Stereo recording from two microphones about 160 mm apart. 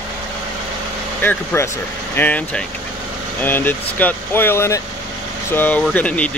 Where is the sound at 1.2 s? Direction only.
15° left (ahead or behind).